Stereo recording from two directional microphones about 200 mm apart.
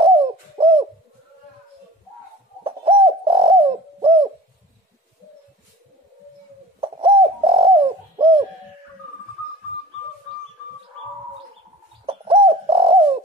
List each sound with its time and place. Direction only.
0.0 s bird: 25° right (ahead or behind)
2.6 s bird: 30° right (ahead or behind)
6.8 s bird: 25° right (ahead or behind)
12.1 s bird: 30° right (ahead or behind)